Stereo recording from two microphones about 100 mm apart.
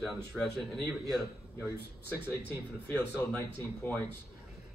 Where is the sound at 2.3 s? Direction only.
20° left (ahead or behind).